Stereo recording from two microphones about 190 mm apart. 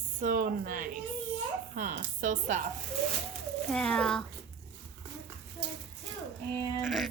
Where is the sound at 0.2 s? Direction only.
45° right (ahead or behind).